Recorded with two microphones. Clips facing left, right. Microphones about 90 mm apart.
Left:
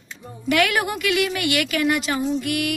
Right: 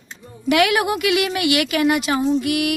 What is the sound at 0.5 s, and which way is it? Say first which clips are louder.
A woman's voice: right 3 dB; 10° right (ahead or behind).